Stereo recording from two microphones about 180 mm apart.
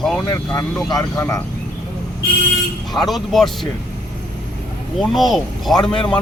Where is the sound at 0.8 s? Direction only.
15° left (ahead or behind).